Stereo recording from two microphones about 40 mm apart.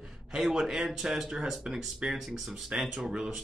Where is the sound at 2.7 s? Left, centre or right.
Right.